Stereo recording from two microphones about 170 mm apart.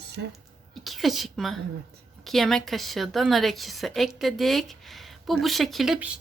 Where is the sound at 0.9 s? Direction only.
Centre (ahead or behind).